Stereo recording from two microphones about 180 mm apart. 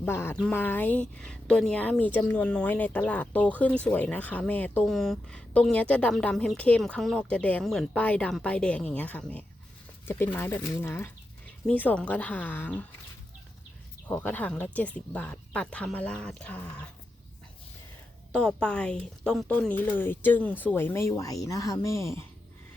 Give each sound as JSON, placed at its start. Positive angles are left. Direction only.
{"t": 0.0, "sound": "speech", "side_deg": 15}
{"t": 14.1, "sound": "speech", "side_deg": 10}
{"t": 18.3, "sound": "speech", "side_deg": 5}